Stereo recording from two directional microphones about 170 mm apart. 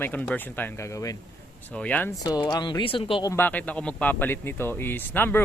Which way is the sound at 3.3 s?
10° left (ahead or behind).